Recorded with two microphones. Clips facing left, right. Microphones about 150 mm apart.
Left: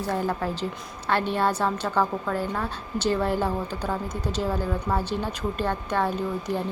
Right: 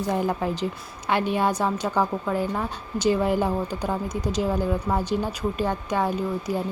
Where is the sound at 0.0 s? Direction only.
15° right (ahead or behind).